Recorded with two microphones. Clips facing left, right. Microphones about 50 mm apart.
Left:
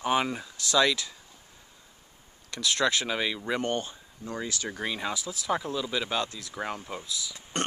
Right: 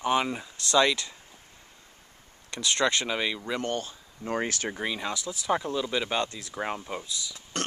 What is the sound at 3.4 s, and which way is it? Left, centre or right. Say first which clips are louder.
Speech: left 1 dB; centre.